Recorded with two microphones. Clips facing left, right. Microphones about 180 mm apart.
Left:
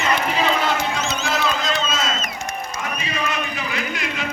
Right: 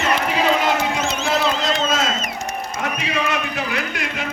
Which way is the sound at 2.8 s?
70° right (ahead or behind).